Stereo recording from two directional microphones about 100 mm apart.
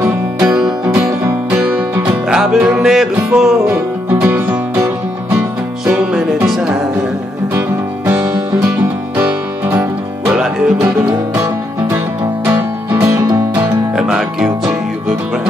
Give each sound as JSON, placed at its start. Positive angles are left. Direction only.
{"t": 0.0, "sound": "music", "side_deg": -15}
{"t": 2.2, "sound": "music", "side_deg": -10}
{"t": 3.6, "sound": "music", "side_deg": -20}
{"t": 5.9, "sound": "music", "side_deg": -10}
{"t": 9.1, "sound": "music", "side_deg": -20}
{"t": 12.4, "sound": "music", "side_deg": -25}
{"t": 13.9, "sound": "music", "side_deg": -5}